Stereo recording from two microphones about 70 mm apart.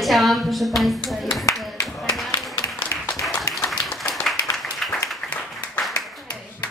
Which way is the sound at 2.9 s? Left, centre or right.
Left.